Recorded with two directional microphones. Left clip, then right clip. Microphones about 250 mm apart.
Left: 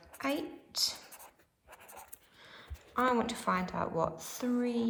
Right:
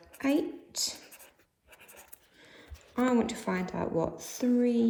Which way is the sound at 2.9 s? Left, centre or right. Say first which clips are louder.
Right 1 dB; centre.